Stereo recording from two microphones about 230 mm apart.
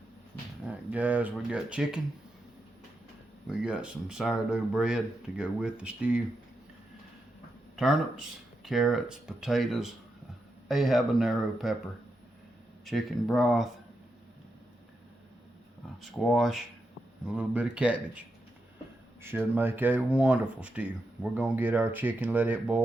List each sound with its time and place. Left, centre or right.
0.7 s speech: centre
3.6 s speech: centre
7.8 s speech: centre
12.8 s speech: centre
16.0 s speech: centre